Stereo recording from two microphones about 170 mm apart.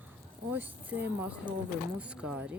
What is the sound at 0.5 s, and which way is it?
Speech, 10° right (ahead or behind).